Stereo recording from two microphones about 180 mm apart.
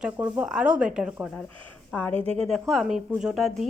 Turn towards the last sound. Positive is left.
turn(degrees=0)  # may be behind; listen again after turning